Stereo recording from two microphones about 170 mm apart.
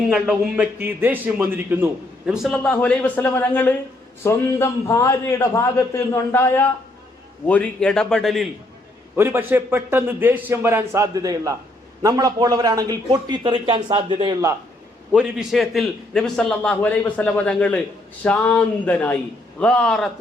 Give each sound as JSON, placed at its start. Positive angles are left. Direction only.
{"t": 0.1, "sound": "a man's voice", "side_deg": -5}
{"t": 2.5, "sound": "a man's voice", "side_deg": 5}
{"t": 9.1, "sound": "a man's voice", "side_deg": -10}
{"t": 15.1, "sound": "a man's voice", "side_deg": -5}